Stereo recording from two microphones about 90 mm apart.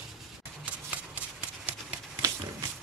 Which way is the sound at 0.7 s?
15° right (ahead or behind).